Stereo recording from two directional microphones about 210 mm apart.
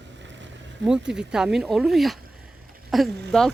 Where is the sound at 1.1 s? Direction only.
5° right (ahead or behind).